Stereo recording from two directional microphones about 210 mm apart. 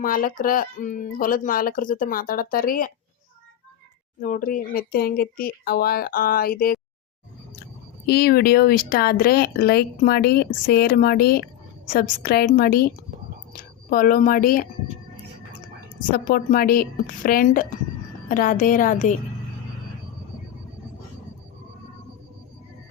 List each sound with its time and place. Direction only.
0.0 s speech: 40° left (ahead or behind)
4.2 s speech: 40° left (ahead or behind)
8.0 s speech: 50° left (ahead or behind)
13.9 s speech: 40° left (ahead or behind)
16.0 s speech: 40° left (ahead or behind)